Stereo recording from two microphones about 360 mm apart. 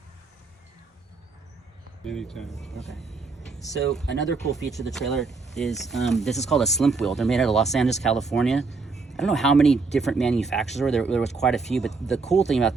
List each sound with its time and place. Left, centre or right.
2.0 s speech: centre
4.0 s speech: left
4.7 s speech: centre